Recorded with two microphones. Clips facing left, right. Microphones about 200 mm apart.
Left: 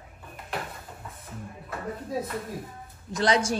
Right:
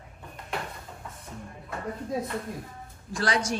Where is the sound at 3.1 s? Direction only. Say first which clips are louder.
Left 4 dB; 20° left (ahead or behind).